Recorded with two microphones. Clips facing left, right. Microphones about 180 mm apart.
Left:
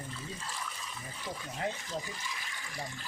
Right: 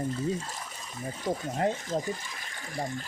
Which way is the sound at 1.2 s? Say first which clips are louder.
Right 9 dB; 45° right (ahead or behind).